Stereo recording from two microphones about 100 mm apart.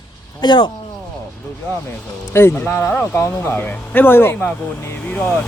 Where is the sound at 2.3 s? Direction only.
20° left (ahead or behind).